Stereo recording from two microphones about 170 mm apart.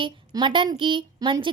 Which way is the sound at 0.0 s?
30° right (ahead or behind).